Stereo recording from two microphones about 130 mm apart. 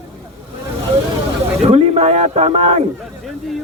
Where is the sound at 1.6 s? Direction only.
55° right (ahead or behind).